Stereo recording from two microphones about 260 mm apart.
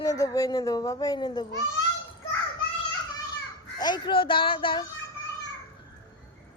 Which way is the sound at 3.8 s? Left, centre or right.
Centre.